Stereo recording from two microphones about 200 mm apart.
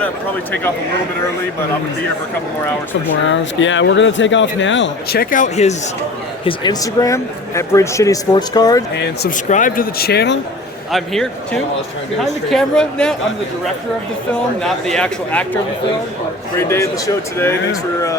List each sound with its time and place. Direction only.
3.2 s speech: 70° left (ahead or behind)
5.2 s speech: 40° left (ahead or behind)
6.4 s speech: 20° left (ahead or behind)
9.5 s speech: 40° left (ahead or behind)
10.9 s speech: centre (ahead or behind)
14.6 s speech: centre (ahead or behind)
16.6 s speech: 15° left (ahead or behind)